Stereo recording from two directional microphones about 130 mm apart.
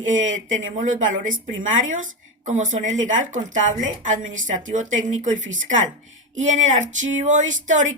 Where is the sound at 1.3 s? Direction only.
80° right.